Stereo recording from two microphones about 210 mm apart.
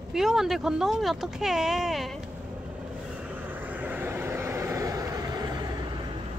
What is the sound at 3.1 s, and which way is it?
Vehicle, 5° right (ahead or behind).